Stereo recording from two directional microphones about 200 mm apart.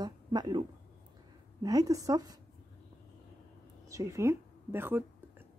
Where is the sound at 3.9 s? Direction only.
15° right (ahead or behind).